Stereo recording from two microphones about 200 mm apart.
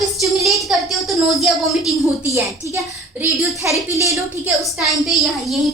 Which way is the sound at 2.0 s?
15° right (ahead or behind).